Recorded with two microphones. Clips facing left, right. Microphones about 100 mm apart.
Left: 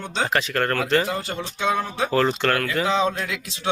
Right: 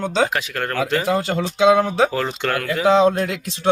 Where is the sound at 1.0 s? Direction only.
90° right.